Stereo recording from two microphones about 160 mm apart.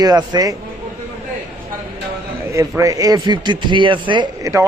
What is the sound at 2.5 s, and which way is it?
A man's voice, 20° right (ahead or behind).